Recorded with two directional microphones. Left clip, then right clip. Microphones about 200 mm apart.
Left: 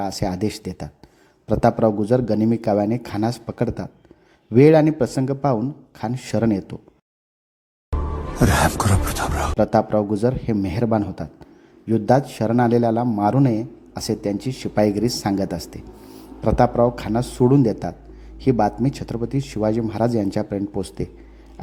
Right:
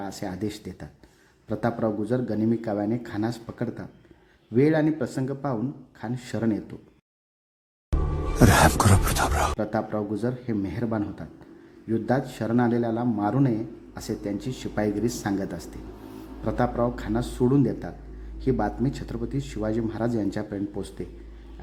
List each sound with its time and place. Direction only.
0.0 s a man's voice: 30° left (ahead or behind)
7.9 s music: centre (ahead or behind)
9.6 s a man's voice: 30° left (ahead or behind)